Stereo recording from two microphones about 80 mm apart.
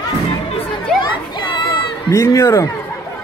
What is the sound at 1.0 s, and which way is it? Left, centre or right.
Children playing, left.